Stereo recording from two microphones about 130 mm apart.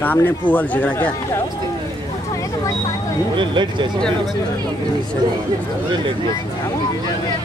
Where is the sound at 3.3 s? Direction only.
35° right (ahead or behind).